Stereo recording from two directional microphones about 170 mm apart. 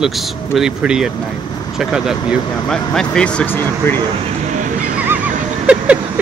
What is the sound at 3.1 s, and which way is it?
Speech, 5° left (ahead or behind).